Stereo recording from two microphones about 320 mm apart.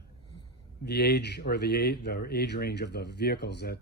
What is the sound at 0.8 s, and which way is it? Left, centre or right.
Speech, left.